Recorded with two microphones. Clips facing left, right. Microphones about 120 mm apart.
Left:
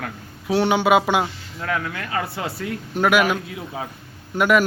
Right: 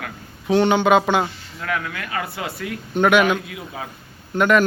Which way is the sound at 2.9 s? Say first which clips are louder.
Right 2 dB; 5° left (ahead or behind).